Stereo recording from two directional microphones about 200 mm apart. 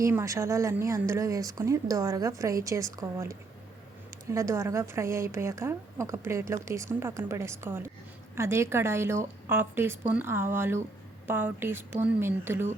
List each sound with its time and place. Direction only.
0.0 s a woman's voice: 15° right (ahead or behind)